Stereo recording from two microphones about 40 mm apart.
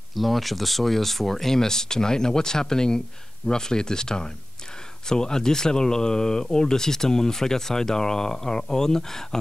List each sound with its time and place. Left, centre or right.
0.1 s speech: centre